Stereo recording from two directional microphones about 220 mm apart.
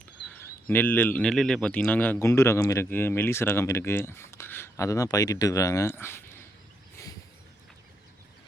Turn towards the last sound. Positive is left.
turn(degrees=10)  # may be behind; listen again after turning